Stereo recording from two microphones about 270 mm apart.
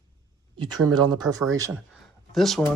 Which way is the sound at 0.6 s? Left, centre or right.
Centre.